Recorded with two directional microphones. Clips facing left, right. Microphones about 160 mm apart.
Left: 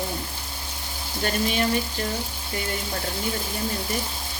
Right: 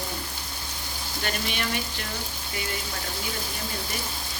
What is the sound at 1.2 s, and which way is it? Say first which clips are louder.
Speech: left 7 dB; 40° left (ahead or behind).